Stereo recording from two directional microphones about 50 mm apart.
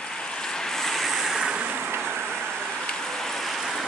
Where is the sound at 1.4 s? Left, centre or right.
Right.